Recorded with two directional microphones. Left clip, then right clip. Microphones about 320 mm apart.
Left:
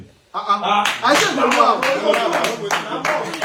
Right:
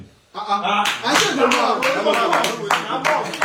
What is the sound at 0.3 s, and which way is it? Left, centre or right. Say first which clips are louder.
Speech: left 3 dB; centre.